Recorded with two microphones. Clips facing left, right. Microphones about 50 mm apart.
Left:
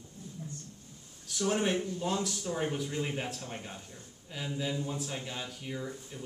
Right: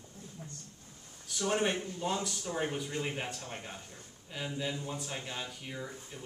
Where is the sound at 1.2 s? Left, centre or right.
Centre.